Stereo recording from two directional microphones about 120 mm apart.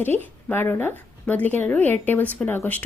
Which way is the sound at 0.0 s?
15° left (ahead or behind).